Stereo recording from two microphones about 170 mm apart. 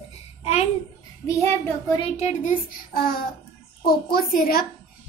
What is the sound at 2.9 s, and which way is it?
A woman's voice, 60° left (ahead or behind).